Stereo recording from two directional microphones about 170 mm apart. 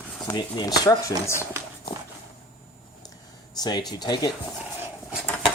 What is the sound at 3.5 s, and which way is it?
Speech, 25° left (ahead or behind).